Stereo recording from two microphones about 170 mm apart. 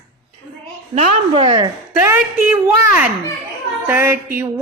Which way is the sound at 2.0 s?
10° right (ahead or behind).